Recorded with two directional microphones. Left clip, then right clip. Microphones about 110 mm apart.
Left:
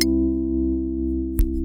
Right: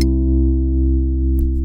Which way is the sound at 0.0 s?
Centre (ahead or behind).